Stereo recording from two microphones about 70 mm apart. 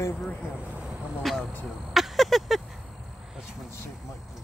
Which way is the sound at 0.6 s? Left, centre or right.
Centre.